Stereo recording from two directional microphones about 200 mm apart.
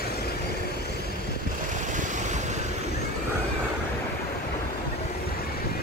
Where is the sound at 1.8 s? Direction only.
40° right (ahead or behind).